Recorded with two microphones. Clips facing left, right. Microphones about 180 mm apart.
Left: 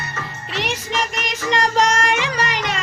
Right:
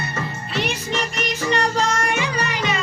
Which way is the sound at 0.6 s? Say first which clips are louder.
Left 1 dB; 90° left.